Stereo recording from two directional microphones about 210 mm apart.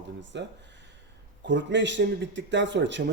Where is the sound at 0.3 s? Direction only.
55° right (ahead or behind).